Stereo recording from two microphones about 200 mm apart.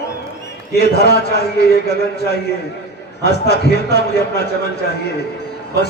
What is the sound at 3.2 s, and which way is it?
Speech, 55° left (ahead or behind).